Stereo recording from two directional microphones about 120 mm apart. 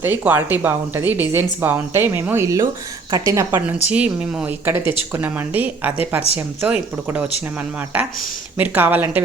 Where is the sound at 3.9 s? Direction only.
10° right (ahead or behind).